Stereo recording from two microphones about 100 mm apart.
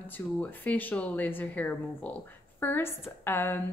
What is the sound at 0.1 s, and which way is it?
A woman's voice, 15° left (ahead or behind).